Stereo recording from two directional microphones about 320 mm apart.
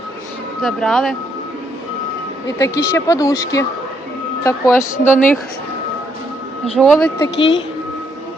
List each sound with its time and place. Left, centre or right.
0.6 s speech: centre
2.6 s speech: centre
6.7 s speech: centre
7.3 s speech: left